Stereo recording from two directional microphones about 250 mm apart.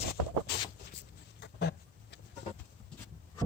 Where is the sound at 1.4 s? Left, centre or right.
Left.